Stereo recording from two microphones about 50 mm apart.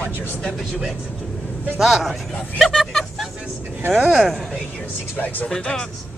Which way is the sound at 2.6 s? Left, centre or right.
Centre.